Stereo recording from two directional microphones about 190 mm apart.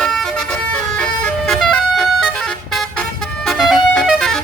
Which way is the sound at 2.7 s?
Centre (ahead or behind).